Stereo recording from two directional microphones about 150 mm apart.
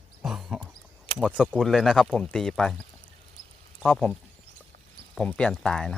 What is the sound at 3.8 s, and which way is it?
Speech, 10° left (ahead or behind).